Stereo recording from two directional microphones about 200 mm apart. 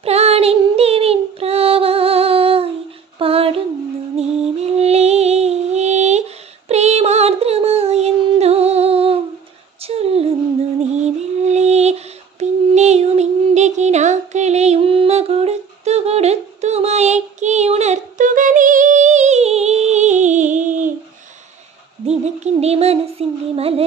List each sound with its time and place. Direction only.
0.0 s child singing: 30° right (ahead or behind)
4.2 s music: 30° right (ahead or behind)
9.8 s a sound: 30° right (ahead or behind)
11.0 s child singing: 35° right (ahead or behind)
22.0 s child singing: 35° right (ahead or behind)